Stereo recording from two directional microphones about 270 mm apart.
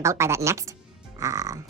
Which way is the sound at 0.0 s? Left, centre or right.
Centre.